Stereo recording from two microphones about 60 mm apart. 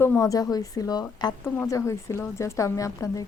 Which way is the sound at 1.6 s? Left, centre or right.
Left.